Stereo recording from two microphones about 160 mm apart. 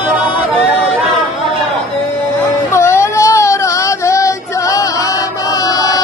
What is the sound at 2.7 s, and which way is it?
Child singing, 15° left (ahead or behind).